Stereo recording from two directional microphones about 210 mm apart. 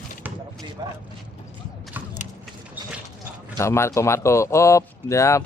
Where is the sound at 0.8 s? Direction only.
20° right (ahead or behind).